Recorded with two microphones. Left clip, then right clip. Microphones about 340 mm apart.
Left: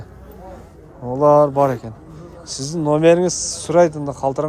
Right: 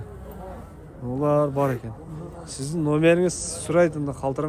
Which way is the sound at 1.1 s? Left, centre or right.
Centre.